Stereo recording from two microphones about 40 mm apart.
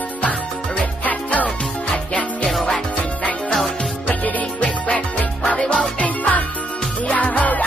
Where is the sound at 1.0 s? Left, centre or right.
Left.